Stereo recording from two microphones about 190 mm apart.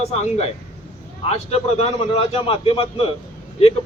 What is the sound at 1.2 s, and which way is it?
Speech, 35° left (ahead or behind).